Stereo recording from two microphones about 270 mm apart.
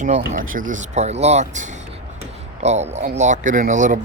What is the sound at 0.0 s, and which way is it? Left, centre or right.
Speech, right.